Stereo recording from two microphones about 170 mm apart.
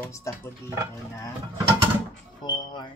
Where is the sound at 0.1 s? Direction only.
15° left (ahead or behind).